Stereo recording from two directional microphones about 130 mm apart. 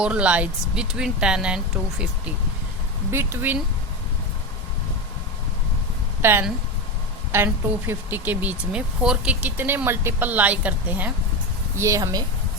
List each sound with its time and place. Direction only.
0.0 s speech: 10° right (ahead or behind)
3.1 s speech: 20° right (ahead or behind)
6.2 s speech: 15° right (ahead or behind)
11.8 s speech: 25° right (ahead or behind)